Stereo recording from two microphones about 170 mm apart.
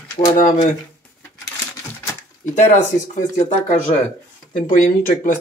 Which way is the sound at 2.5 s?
45° left (ahead or behind).